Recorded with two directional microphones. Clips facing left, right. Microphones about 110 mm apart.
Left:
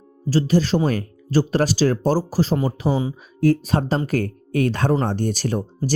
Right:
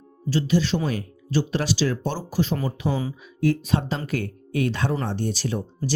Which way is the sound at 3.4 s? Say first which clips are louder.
Left 4 dB; 40° left (ahead or behind).